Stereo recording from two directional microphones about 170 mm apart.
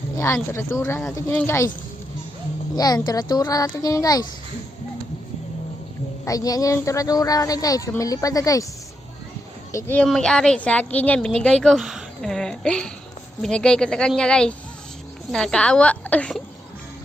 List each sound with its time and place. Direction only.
0.5 s speech: 15° left (ahead or behind)
2.7 s speech: 20° left (ahead or behind)
6.2 s speech: 20° left (ahead or behind)
9.7 s a woman's voice: 10° left (ahead or behind)